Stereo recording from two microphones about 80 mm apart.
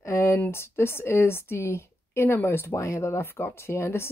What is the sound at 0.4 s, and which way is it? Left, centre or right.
A woman's voice, left.